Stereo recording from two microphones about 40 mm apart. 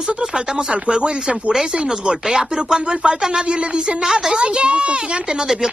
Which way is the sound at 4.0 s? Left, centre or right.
Centre.